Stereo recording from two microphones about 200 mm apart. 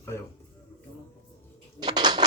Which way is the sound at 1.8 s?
20° right (ahead or behind).